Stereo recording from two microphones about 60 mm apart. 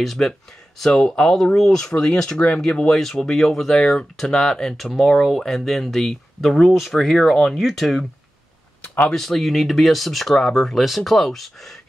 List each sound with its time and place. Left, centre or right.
0.0 s speech: centre